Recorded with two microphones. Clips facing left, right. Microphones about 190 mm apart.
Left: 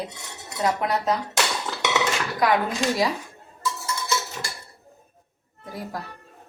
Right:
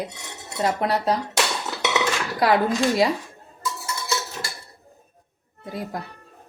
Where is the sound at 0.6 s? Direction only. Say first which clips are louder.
Right 1 dB; 35° right (ahead or behind).